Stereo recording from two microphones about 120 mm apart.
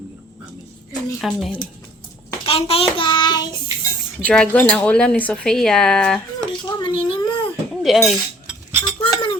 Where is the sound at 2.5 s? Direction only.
55° left (ahead or behind); by 3.6 s 40° left (ahead or behind).